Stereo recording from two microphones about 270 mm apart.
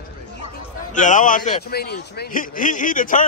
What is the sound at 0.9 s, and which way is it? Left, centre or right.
A man's voice, left.